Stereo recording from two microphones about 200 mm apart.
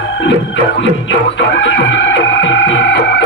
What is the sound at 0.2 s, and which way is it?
Music, 70° left (ahead or behind).